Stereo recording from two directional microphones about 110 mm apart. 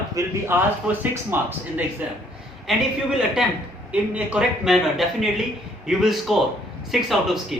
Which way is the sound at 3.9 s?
10° right (ahead or behind).